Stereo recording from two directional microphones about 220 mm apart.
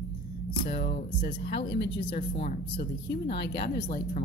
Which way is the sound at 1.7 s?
45° left (ahead or behind).